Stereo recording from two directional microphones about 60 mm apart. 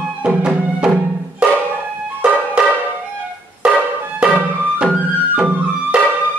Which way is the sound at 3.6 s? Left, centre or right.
Centre.